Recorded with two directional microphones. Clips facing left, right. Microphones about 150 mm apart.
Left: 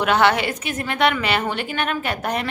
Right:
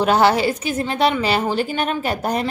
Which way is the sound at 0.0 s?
35° right (ahead or behind).